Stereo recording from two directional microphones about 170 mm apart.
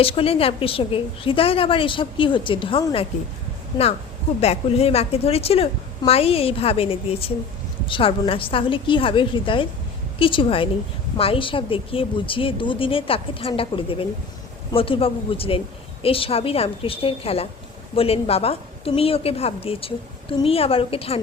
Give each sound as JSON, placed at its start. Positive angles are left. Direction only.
{"t": 0.0, "sound": "a woman's voice", "side_deg": 35}
{"t": 4.4, "sound": "a woman's voice", "side_deg": 35}